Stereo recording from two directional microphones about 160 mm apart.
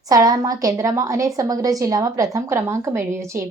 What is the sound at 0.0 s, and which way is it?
A woman's voice, 20° right (ahead or behind).